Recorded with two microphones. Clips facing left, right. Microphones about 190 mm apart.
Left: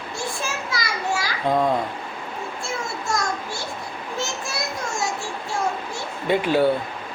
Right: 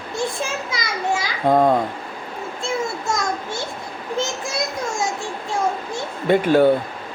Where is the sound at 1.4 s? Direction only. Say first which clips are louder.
Right 5 dB; 50° right (ahead or behind).